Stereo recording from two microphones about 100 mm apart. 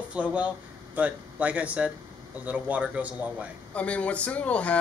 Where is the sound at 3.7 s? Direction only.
10° left (ahead or behind).